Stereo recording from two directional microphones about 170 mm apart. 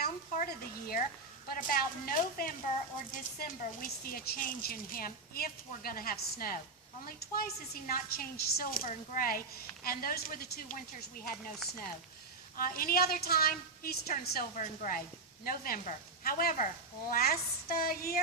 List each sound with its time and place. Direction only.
0.0 s a sound: 60° left (ahead or behind)
1.5 s a woman's voice: 55° left (ahead or behind)
12.5 s a woman's voice: 60° left (ahead or behind)